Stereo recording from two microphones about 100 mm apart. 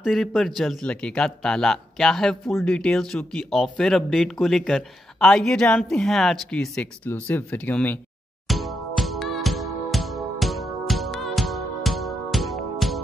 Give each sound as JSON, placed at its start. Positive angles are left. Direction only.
{"t": 0.0, "sound": "speech", "side_deg": 0}
{"t": 7.1, "sound": "speech", "side_deg": 20}
{"t": 8.5, "sound": "music", "side_deg": 0}